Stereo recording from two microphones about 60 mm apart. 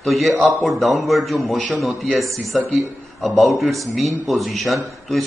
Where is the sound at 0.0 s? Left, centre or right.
Centre.